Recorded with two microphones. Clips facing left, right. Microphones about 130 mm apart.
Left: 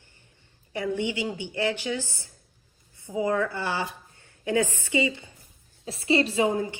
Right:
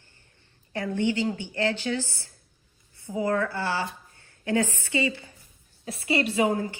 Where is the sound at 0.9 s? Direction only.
15° left (ahead or behind).